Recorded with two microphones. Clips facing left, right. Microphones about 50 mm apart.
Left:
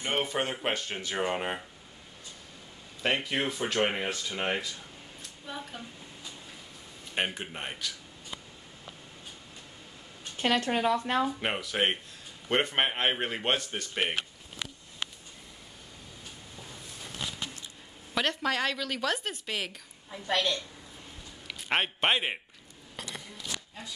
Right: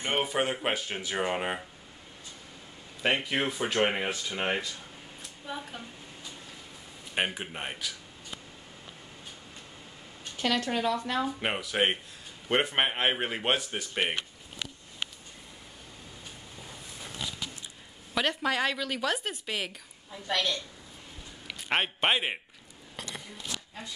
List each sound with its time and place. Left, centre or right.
0.1 s speech: centre
3.0 s speech: centre
7.2 s speech: centre
10.3 s speech: left
11.3 s speech: centre
18.1 s speech: centre
20.1 s a woman's voice: centre
21.5 s a man's voice: centre
22.9 s a sound: centre